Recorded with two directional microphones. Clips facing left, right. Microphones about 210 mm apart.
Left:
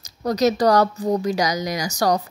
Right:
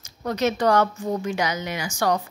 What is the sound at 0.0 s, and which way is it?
A woman's voice, 40° left (ahead or behind).